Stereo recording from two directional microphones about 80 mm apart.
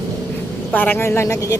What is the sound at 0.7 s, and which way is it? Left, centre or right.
Speech, left.